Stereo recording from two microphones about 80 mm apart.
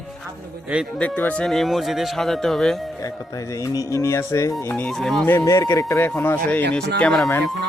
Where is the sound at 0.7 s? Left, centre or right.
Centre.